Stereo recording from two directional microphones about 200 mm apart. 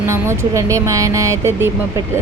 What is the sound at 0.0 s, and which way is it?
Speech, 15° right (ahead or behind).